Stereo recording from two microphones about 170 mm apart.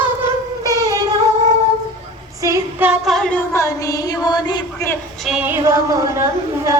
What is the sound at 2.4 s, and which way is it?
Music, 15° right (ahead or behind).